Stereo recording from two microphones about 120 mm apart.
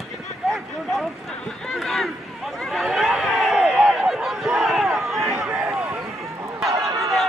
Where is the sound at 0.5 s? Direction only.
Centre (ahead or behind).